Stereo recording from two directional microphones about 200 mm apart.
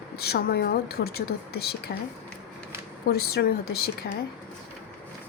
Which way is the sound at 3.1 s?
50° left (ahead or behind).